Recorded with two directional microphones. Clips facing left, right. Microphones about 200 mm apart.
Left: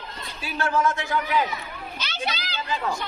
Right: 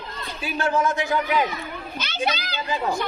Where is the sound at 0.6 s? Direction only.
20° right (ahead or behind).